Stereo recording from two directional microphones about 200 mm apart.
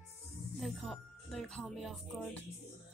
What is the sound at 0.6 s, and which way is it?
Speech, centre (ahead or behind).